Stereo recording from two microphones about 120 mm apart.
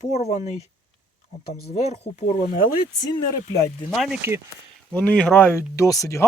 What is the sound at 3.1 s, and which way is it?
Speech, 30° left (ahead or behind).